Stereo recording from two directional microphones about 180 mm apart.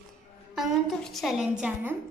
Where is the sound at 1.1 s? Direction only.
Centre (ahead or behind).